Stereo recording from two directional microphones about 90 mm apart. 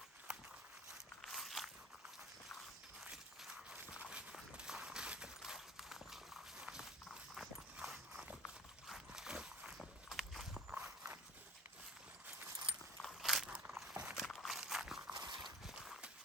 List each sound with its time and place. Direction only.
0.3 s walk: 10° right (ahead or behind)
1.2 s walk: centre (ahead or behind)
3.0 s walk: 5° right (ahead or behind)
6.6 s clip-clop: 5° right (ahead or behind)
8.9 s walk: 5° right (ahead or behind)
13.0 s walk: centre (ahead or behind)
13.5 s biting: 15° right (ahead or behind)
13.8 s a sound: 10° right (ahead or behind)
14.3 s walk: centre (ahead or behind)
15.1 s dog: 50° right (ahead or behind)
15.6 s horse: 5° right (ahead or behind)